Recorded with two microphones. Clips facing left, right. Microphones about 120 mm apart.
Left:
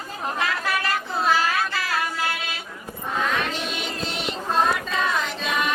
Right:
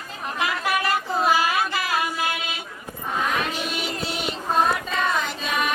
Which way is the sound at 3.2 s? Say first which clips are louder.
Even; 5° right (ahead or behind).